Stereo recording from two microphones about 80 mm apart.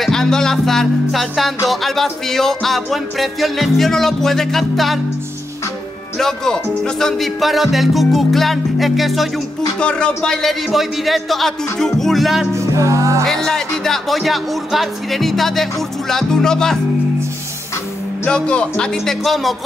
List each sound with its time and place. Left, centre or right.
0.0 s music: centre
6.1 s music: centre
9.8 s music: centre
12.5 s music: right
13.2 s music: centre
18.2 s speech: centre
19.2 s music: centre